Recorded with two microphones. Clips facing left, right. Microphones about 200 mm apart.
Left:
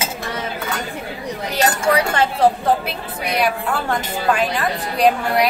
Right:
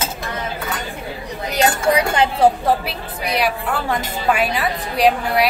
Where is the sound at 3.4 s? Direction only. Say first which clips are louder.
Left 2 dB; 5° right (ahead or behind).